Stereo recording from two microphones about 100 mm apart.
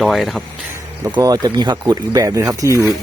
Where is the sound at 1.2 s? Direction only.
40° right (ahead or behind).